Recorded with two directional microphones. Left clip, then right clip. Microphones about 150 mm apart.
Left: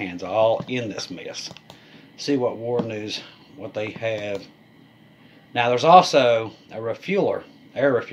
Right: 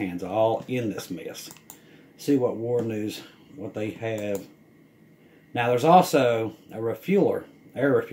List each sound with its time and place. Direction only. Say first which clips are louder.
0.0 s speech: left 4 dB; 10° right (ahead or behind)
5.5 s speech: left 4 dB; 10° right (ahead or behind)